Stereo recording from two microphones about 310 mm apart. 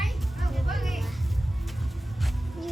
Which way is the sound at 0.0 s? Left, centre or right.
Centre.